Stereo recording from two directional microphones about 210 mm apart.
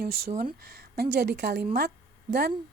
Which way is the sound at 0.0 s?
45° right (ahead or behind).